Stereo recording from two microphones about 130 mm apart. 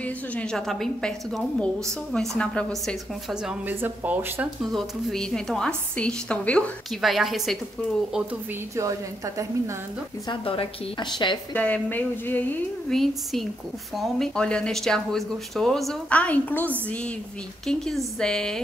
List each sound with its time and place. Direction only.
0.0 s a woman's voice: 10° left (ahead or behind)
3.6 s speech: 15° right (ahead or behind)
4.6 s a woman's voice: 5° left (ahead or behind)
7.0 s speech: centre (ahead or behind)
8.7 s a woman's voice: 25° right (ahead or behind)
10.2 s a woman's voice: 40° left (ahead or behind)
11.5 s a woman's voice: 10° left (ahead or behind)
12.9 s speech: centre (ahead or behind)